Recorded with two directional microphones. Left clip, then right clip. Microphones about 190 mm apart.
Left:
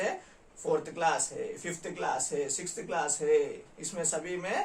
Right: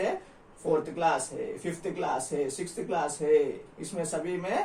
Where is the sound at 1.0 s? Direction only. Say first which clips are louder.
Right 2 dB; 20° left (ahead or behind).